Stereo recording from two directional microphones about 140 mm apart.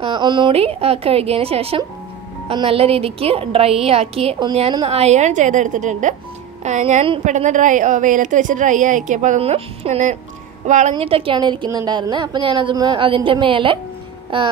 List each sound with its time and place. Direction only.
0.0 s a woman's voice: 35° right (ahead or behind); by 9.4 s 60° right (ahead or behind)
9.4 s a woman's voice: 50° right (ahead or behind)
11.0 s a woman's voice: 40° right (ahead or behind)